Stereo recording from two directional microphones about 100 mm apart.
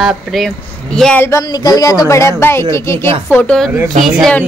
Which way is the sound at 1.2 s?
30° left (ahead or behind).